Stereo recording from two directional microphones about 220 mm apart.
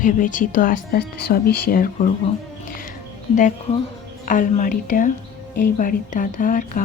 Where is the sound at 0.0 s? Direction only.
35° left (ahead or behind).